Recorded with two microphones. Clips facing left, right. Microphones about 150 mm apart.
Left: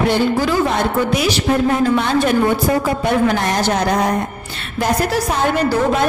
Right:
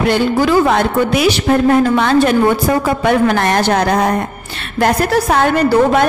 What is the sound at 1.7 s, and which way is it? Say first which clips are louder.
Speech: right 4 dB; 85° right.